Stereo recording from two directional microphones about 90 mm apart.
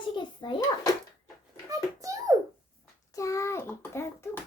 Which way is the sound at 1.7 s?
40° right (ahead or behind).